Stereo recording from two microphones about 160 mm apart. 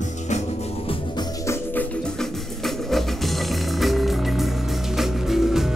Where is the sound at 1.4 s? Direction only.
10° left (ahead or behind).